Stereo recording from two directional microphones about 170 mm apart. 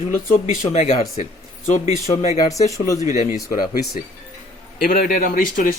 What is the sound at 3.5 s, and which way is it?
A man's voice, 60° left (ahead or behind).